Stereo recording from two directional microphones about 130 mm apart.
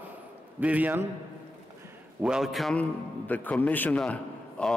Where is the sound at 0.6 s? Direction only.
10° right (ahead or behind).